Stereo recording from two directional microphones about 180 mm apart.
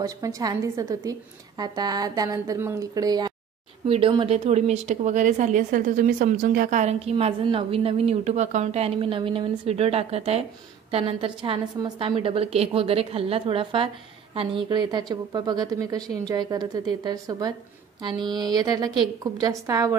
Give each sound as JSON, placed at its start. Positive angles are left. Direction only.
{"t": 0.0, "sound": "a woman's voice", "side_deg": -20}
{"t": 3.8, "sound": "a woman's voice", "side_deg": -30}